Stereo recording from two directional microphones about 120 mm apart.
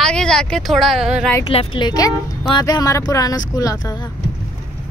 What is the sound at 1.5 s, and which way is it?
Speech, 50° left (ahead or behind).